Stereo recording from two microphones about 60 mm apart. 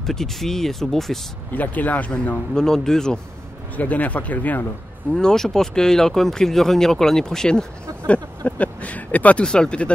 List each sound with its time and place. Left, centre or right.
0.0 s speech: centre
1.5 s speech: left
2.5 s speech: centre
3.7 s speech: left
5.1 s speech: centre
8.5 s a sound: left
9.4 s speech: centre